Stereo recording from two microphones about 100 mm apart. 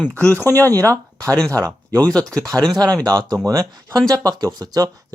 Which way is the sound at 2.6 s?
45° right (ahead or behind).